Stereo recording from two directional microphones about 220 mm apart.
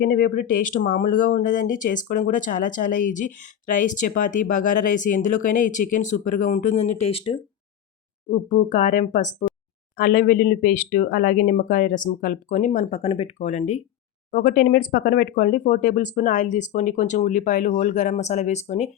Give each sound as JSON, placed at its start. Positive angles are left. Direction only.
{"t": 0.0, "sound": "speech", "side_deg": 40}